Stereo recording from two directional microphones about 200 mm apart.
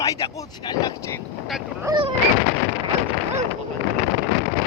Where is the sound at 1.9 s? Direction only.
15° right (ahead or behind).